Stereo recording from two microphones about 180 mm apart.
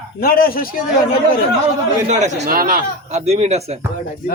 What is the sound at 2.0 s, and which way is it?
Speech, 40° right (ahead or behind).